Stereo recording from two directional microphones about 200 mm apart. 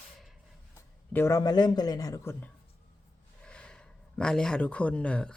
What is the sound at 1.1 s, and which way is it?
Speech, 15° left (ahead or behind).